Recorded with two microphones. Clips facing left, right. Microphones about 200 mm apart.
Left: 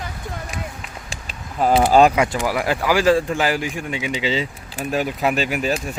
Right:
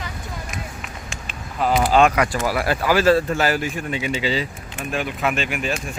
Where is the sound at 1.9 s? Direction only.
35° left (ahead or behind).